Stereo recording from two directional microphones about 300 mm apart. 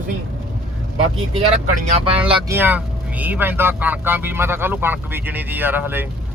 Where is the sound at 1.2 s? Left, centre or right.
Centre.